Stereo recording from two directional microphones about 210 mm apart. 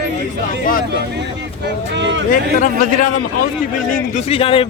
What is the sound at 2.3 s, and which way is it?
Speech, 40° left (ahead or behind).